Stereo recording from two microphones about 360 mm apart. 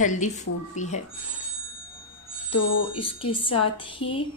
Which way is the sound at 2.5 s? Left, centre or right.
Left.